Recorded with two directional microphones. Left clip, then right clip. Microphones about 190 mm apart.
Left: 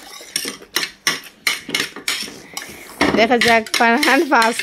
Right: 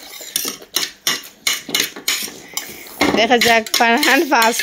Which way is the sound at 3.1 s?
15° left (ahead or behind).